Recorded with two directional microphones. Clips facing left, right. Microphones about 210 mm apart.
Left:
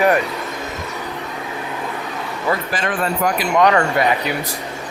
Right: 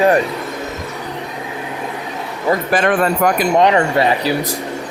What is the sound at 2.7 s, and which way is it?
Speech, 60° right (ahead or behind).